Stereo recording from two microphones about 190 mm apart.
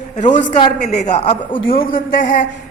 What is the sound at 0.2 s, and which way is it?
A man's voice, 40° left (ahead or behind).